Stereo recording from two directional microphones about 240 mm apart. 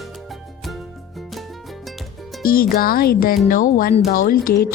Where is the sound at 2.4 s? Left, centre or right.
Left.